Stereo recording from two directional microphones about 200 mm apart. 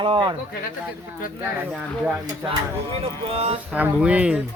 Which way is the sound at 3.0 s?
30° right (ahead or behind).